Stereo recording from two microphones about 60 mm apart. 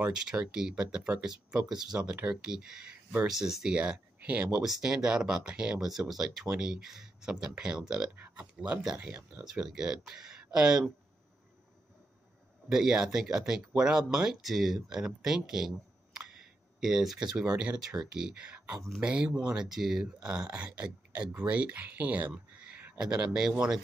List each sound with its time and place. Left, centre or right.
0.0 s speech: centre
4.6 s speech: centre
5.8 s speech: centre
8.9 s speech: right
9.4 s speech: centre
12.6 s speech: centre
20.2 s speech: centre
22.3 s a sound: centre
22.9 s speech: centre